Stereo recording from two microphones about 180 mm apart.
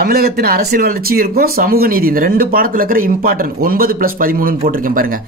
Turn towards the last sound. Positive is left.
turn(degrees=-50)  # may be behind; listen again after turning